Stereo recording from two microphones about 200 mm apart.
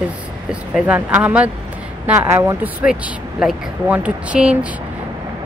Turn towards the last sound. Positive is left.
turn(degrees=-5)  # may be behind; listen again after turning